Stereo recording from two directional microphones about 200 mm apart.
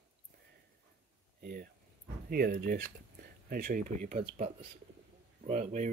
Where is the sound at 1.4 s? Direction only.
50° right (ahead or behind).